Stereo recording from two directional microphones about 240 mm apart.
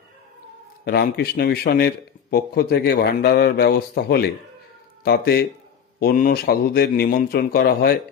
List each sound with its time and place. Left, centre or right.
0.8 s speech: left